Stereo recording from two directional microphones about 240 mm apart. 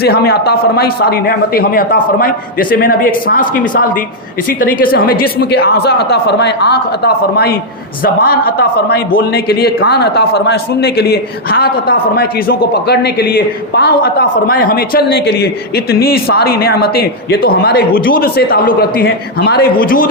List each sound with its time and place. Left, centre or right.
0.0 s a man's voice: left